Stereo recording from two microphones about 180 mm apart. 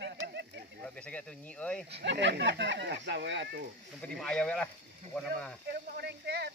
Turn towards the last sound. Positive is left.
turn(degrees=-65)  # may be behind; listen again after turning